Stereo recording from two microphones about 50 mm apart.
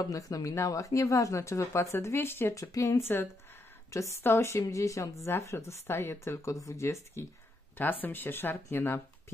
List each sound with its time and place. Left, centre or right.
0.1 s speech: left
2.1 s speech: left
2.5 s speech: left
3.0 s speech: left
3.9 s a woman's voice: left
4.2 s speech: left
4.5 s speech: left
5.2 s a woman's voice: left
6.2 s speech: left
7.7 s speech: left